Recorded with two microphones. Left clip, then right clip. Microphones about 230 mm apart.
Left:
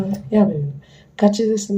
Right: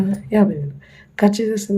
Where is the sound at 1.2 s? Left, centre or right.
Right.